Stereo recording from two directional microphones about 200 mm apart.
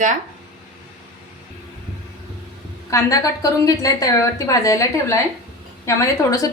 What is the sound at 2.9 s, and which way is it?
A woman's voice, 15° left (ahead or behind).